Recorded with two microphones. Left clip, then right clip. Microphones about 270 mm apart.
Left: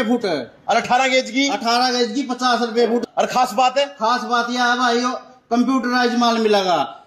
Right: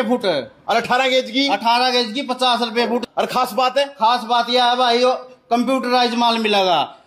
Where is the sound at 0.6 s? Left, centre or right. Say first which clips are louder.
Left 1 dB; centre.